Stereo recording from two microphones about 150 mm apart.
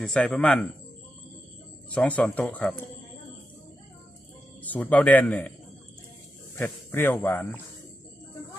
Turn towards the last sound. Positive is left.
turn(degrees=10)  # may be behind; listen again after turning